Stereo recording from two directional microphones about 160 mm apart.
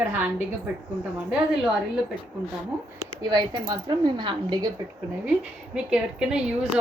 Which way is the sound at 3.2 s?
25° right (ahead or behind).